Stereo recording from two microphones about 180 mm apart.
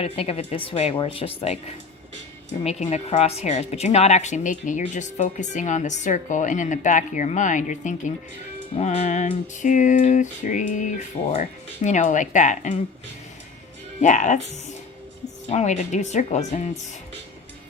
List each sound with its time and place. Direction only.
0.0 s a woman's voice: 35° left (ahead or behind)
14.0 s a woman's voice: 40° left (ahead or behind)